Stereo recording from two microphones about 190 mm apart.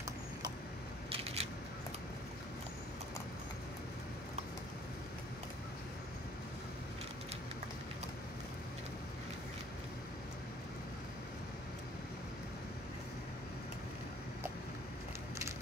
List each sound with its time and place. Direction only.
1.1 s scissors: 35° right (ahead or behind)